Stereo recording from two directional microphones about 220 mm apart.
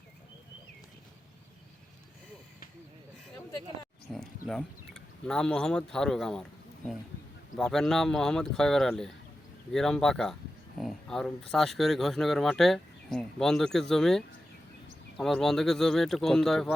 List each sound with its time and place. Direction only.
4.1 s speech: centre (ahead or behind)
7.5 s speech: centre (ahead or behind)